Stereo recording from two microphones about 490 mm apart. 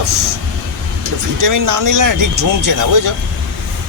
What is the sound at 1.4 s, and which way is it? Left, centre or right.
Speech, right.